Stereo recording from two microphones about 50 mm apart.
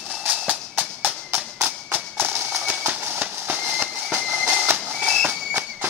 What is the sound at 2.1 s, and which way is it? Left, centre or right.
Clip-clop, right.